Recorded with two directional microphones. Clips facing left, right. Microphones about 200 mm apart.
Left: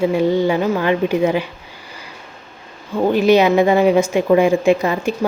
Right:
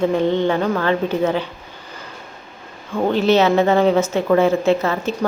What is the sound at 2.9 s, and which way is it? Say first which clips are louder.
A woman's voice: left 2 dB; 10° left (ahead or behind).